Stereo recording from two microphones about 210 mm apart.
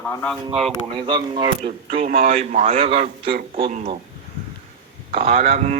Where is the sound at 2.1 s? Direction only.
45° right (ahead or behind).